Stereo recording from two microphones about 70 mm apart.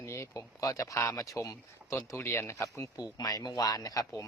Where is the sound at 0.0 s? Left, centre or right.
Left.